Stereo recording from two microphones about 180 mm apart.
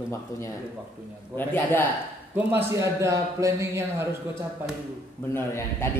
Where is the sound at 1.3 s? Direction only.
10° left (ahead or behind).